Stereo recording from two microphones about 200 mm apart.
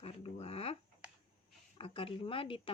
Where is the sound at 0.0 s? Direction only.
30° left (ahead or behind).